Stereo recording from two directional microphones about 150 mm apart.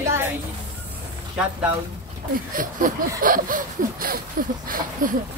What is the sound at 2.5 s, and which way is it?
Speech, 65° right (ahead or behind).